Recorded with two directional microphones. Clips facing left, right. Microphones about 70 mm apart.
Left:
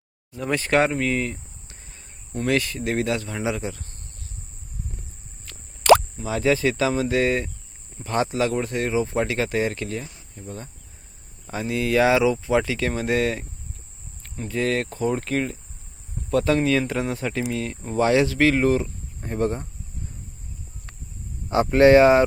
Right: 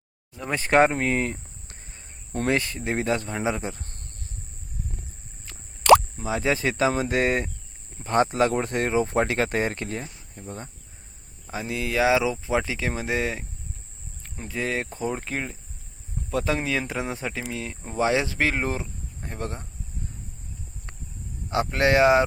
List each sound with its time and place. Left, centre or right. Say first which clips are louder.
0.7 s a sound: right 2 dB; right
2.5 s speech: left 2 dB; right
6.1 s speech: left 3 dB; right
11.7 s speech: left 3 dB; centre
17.5 s speech: left 6 dB; centre; by 18.9 s right
19.2 s speech: left 9 dB; centre
21.5 s speech: left 7 dB; centre